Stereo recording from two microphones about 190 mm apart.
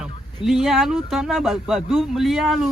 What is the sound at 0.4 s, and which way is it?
Speech, centre (ahead or behind).